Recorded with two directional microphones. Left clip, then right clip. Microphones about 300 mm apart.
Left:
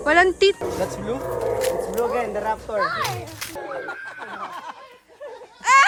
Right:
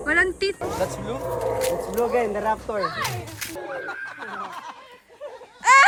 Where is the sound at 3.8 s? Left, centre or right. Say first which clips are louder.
Even; left.